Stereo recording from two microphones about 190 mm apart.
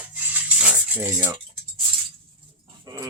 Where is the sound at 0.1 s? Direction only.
5° right (ahead or behind).